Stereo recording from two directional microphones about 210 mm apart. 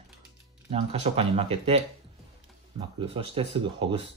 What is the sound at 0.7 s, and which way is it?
Speech, 30° right (ahead or behind).